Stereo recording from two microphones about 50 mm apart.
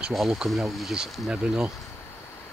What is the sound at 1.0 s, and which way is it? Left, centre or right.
Speech, centre.